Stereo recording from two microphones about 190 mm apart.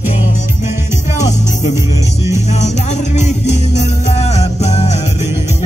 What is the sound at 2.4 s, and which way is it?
Music, 35° left (ahead or behind).